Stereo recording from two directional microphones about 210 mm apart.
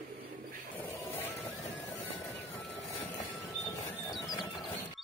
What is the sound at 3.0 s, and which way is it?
Train, 15° left (ahead or behind).